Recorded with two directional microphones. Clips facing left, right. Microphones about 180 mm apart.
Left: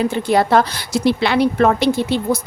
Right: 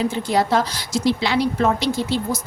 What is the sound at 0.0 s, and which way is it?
A woman's voice, 60° left (ahead or behind).